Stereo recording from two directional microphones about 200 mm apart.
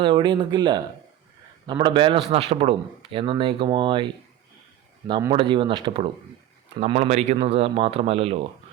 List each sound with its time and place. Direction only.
0.0 s speech: 25° right (ahead or behind)
5.3 s speech: 25° right (ahead or behind)